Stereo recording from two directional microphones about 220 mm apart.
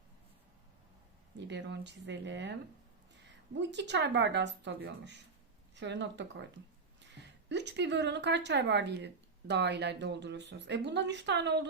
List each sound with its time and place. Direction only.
1.4 s speech: 50° right (ahead or behind)